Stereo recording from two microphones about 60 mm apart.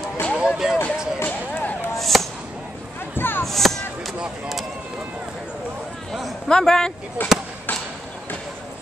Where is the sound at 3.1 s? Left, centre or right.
Left.